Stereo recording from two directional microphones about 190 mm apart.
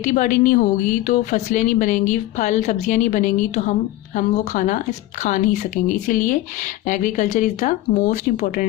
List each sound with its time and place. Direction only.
0.0 s speech: 45° left (ahead or behind)